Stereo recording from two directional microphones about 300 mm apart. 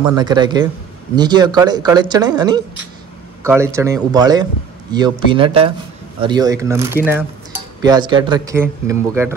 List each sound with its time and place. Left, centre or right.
0.1 s speech: centre